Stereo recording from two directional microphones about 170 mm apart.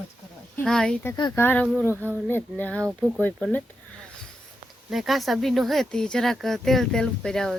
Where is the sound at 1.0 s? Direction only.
25° left (ahead or behind).